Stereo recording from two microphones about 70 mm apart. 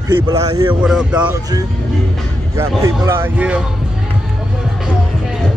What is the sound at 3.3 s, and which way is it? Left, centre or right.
Speech, centre.